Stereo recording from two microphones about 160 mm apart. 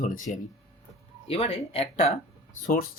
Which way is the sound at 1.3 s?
35° left (ahead or behind).